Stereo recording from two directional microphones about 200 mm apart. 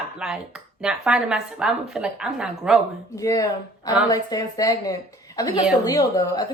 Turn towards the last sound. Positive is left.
turn(degrees=20)  # may be behind; listen again after turning